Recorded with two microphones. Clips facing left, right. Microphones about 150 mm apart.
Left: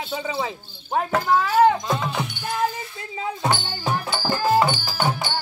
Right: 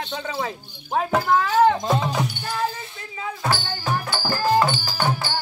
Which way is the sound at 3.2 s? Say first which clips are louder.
Left 2 dB; 20° left (ahead or behind).